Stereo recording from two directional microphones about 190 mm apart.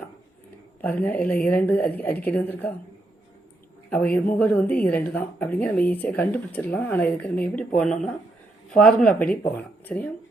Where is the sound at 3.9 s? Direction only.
5° left (ahead or behind).